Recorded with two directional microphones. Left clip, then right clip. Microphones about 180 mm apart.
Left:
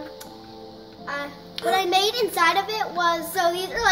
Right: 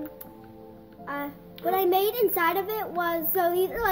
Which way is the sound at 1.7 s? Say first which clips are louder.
Left 3 dB; 50° right (ahead or behind).